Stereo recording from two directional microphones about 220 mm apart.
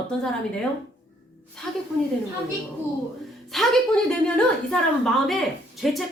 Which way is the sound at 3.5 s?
Centre (ahead or behind).